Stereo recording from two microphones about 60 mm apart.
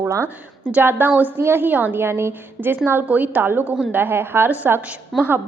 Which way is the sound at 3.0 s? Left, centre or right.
Right.